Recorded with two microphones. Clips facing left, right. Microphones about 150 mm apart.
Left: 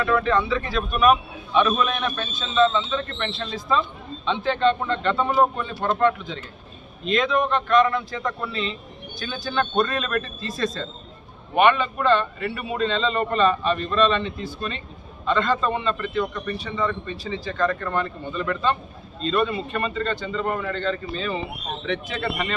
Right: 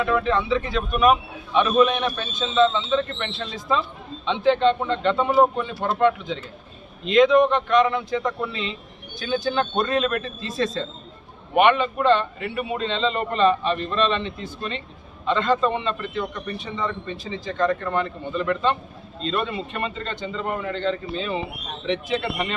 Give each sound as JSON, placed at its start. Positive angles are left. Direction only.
{"t": 0.0, "sound": "a man's voice", "side_deg": -15}
{"t": 15.3, "sound": "a man's voice", "side_deg": -20}